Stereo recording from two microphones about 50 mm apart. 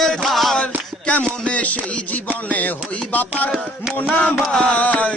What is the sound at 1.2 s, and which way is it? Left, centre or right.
Music, left.